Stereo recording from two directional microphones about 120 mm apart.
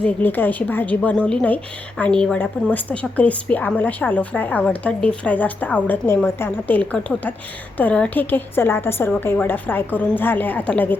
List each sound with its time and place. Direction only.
0.0 s a woman's voice: 15° left (ahead or behind)